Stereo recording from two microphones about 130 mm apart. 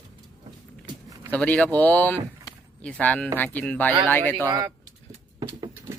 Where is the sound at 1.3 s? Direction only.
10° left (ahead or behind).